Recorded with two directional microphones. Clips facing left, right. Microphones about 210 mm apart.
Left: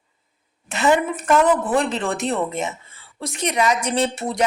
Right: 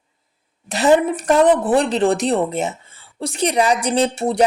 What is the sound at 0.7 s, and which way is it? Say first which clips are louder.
A woman's voice: right 4 dB; 35° right (ahead or behind).